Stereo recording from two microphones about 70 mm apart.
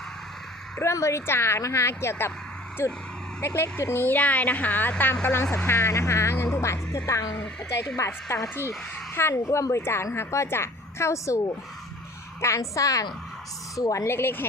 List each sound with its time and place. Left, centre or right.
0.8 s a woman's voice: left
4.0 s a woman's voice: left